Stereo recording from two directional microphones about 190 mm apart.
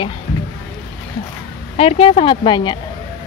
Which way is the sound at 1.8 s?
30° left (ahead or behind).